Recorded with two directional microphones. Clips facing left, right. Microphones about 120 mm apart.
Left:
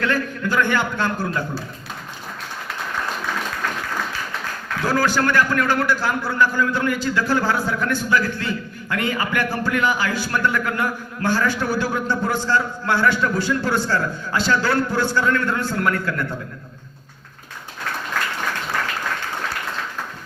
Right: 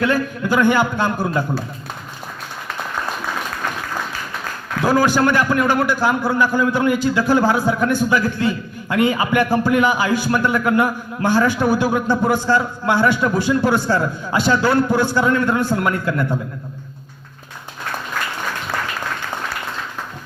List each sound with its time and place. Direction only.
0.0 s a man's voice: 15° right (ahead or behind)
4.8 s a man's voice: 15° right (ahead or behind)